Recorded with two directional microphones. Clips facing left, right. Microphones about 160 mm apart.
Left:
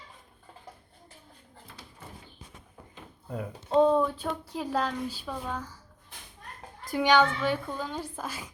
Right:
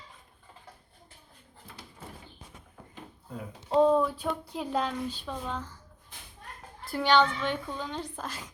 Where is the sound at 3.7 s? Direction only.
5° right (ahead or behind); by 5.8 s 10° left (ahead or behind).